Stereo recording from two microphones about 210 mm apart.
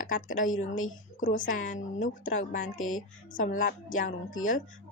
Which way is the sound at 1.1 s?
40° left (ahead or behind).